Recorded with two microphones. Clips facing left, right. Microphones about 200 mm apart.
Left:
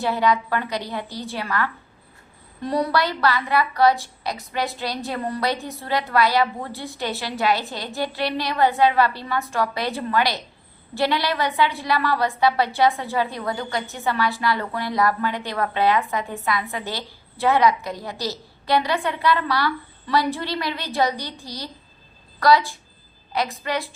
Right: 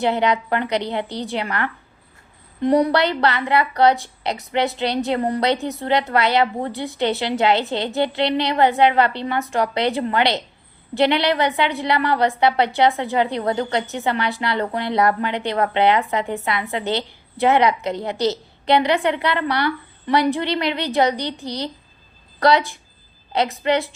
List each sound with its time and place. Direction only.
0.0 s a woman's voice: 20° right (ahead or behind)